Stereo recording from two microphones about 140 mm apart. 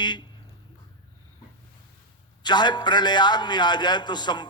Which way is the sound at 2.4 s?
30° left (ahead or behind).